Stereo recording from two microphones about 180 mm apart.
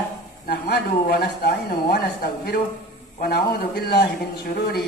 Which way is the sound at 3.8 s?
65° left (ahead or behind).